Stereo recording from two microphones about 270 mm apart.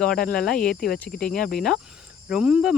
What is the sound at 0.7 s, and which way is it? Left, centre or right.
Speech, left.